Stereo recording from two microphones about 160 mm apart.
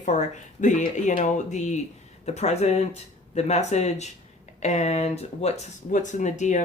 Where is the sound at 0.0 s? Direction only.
50° left (ahead or behind).